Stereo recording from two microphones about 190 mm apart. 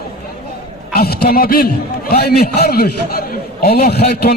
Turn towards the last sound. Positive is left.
turn(degrees=55)  # may be behind; listen again after turning